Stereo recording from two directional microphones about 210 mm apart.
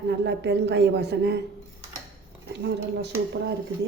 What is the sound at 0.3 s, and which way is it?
A woman's voice, 55° right (ahead or behind).